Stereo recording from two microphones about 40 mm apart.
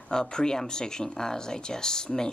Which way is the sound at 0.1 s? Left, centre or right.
Centre.